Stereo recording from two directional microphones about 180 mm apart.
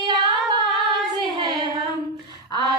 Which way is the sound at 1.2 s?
25° right (ahead or behind).